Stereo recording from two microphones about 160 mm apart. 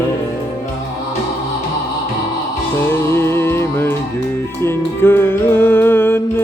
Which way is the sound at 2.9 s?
15° left (ahead or behind).